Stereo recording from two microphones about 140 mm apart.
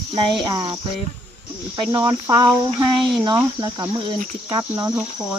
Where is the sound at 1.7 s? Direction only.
30° right (ahead or behind).